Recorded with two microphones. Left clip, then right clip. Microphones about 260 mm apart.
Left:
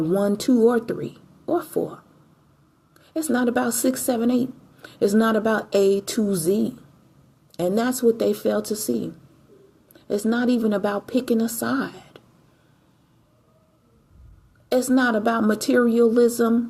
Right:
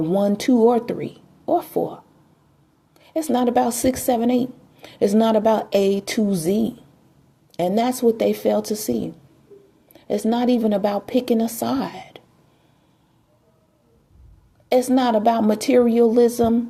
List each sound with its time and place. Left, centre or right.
0.0 s a woman's voice: centre
3.0 s a woman's voice: right
9.9 s a woman's voice: right
14.8 s a woman's voice: right